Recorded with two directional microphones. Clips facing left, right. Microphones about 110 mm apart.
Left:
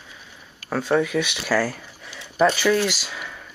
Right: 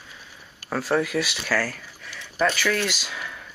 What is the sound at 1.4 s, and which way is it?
Speech, 15° left (ahead or behind).